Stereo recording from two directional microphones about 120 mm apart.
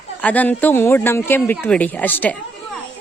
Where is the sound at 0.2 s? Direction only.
10° left (ahead or behind).